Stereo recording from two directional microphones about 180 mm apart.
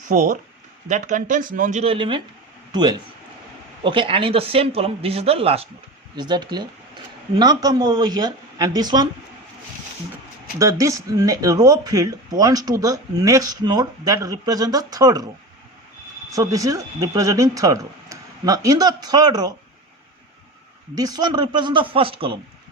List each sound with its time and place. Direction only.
0.1 s speech: 45° right (ahead or behind)
1.8 s speech: 30° right (ahead or behind)
3.8 s speech: 30° right (ahead or behind)
10.6 s speech: 15° right (ahead or behind)
16.3 s speech: 20° right (ahead or behind)
20.9 s speech: 20° right (ahead or behind)